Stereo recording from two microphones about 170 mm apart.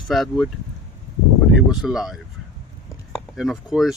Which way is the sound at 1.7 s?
5° right (ahead or behind).